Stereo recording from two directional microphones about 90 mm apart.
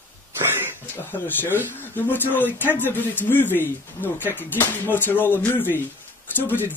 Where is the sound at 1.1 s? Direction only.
20° left (ahead or behind).